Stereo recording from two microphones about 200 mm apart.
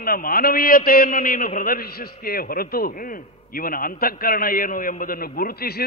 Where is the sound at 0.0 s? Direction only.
45° left (ahead or behind).